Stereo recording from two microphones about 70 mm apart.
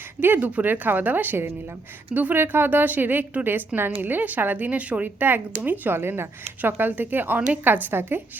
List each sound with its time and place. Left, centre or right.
0.2 s a woman's voice: right